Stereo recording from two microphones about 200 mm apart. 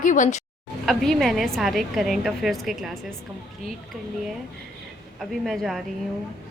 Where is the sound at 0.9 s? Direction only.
Centre (ahead or behind).